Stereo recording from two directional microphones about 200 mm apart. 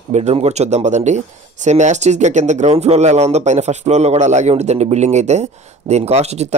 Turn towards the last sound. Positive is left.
turn(degrees=-35)  # may be behind; listen again after turning